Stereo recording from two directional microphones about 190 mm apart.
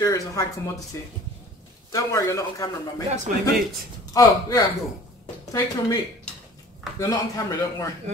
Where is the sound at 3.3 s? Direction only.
45° right (ahead or behind).